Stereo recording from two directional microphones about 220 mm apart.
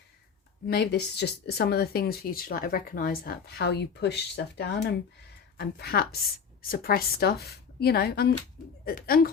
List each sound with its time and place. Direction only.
0.7 s speech: 45° left (ahead or behind)